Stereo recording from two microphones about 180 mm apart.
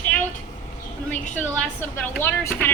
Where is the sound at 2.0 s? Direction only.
10° left (ahead or behind).